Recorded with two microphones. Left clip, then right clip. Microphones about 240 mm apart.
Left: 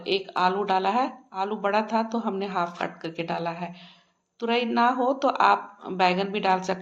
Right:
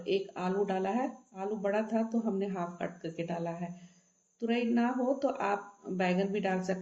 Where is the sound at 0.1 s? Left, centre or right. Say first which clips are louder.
Left 9 dB; left.